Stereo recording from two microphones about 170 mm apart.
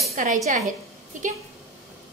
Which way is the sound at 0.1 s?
50° right (ahead or behind).